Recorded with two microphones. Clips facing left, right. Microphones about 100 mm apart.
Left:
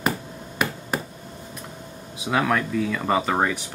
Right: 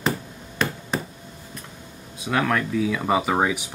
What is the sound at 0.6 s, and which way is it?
Finger snapping, 10° left (ahead or behind).